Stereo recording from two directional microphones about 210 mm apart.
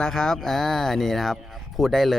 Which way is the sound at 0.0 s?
5° left (ahead or behind).